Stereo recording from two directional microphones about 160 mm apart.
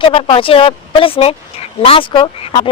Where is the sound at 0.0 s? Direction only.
35° left (ahead or behind).